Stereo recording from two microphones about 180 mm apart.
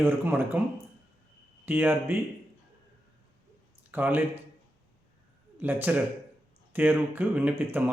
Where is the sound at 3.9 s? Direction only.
10° right (ahead or behind).